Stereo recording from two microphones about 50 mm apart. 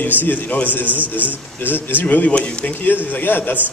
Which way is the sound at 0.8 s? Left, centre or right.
Right.